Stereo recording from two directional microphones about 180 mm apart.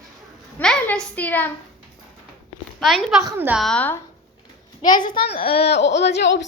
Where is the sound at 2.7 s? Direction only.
Centre (ahead or behind).